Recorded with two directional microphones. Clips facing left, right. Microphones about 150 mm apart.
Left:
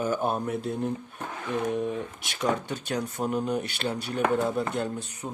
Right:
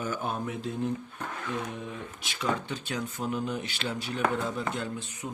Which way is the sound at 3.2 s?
50° left (ahead or behind).